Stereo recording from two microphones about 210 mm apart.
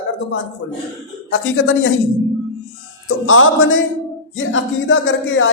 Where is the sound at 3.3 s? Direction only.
70° left (ahead or behind).